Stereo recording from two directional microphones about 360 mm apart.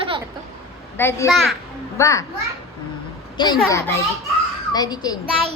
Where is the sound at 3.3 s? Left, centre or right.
Centre.